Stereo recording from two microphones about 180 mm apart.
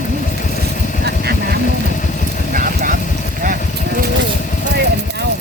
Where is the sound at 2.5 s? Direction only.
50° right (ahead or behind).